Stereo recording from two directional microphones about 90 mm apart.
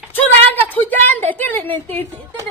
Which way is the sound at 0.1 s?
20° left (ahead or behind).